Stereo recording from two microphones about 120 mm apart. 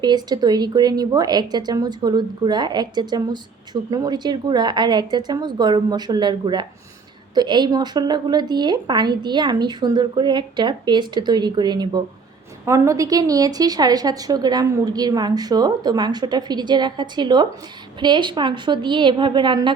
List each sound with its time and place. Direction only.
0.0 s a woman's voice: 35° right (ahead or behind)
12.6 s a woman's voice: 25° right (ahead or behind); by 19.7 s 40° right (ahead or behind)